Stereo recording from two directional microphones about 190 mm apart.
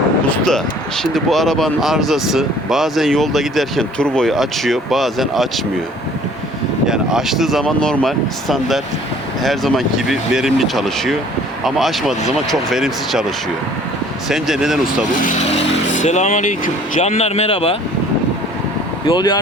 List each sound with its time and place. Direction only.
0.3 s a sound: 5° left (ahead or behind)
1.1 s speech: centre (ahead or behind)
6.8 s speech: 5° right (ahead or behind)
14.3 s speech: centre (ahead or behind)
16.0 s speech: 40° left (ahead or behind)
19.0 s speech: 20° left (ahead or behind)